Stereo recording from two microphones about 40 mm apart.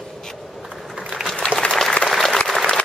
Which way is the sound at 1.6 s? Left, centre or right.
Left.